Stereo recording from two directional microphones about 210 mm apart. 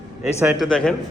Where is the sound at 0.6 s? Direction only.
5° left (ahead or behind).